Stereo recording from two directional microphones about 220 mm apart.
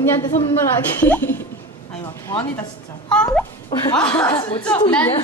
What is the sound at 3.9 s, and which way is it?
Speech, 5° left (ahead or behind).